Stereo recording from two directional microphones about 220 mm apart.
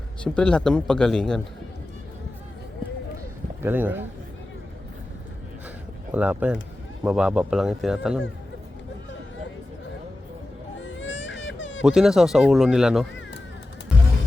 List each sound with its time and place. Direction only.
0.3 s speech: 5° left (ahead or behind)
3.6 s speech: 10° right (ahead or behind)
6.1 s speech: 5° right (ahead or behind)
10.8 s baby cry: 55° left (ahead or behind)
11.8 s speech: 5° right (ahead or behind)